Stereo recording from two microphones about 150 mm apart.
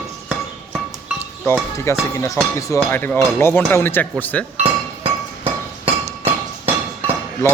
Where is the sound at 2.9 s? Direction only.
15° left (ahead or behind).